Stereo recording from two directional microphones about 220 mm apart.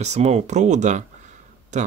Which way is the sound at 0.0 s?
30° right (ahead or behind).